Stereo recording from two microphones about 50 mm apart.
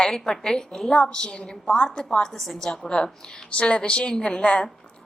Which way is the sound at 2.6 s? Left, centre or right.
Centre.